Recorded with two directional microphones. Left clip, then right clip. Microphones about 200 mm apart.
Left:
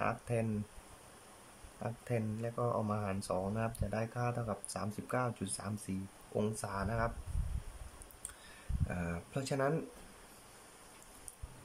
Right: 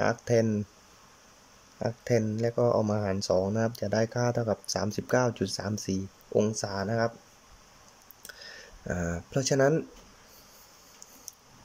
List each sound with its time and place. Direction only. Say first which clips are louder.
0.0 s speech: right 11 dB; 30° right (ahead or behind)
1.8 s speech: right 12 dB; 30° right (ahead or behind)
8.8 s speech: right 9 dB; 35° right (ahead or behind)